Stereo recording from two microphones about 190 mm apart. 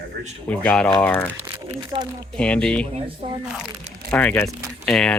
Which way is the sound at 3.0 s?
30° right (ahead or behind).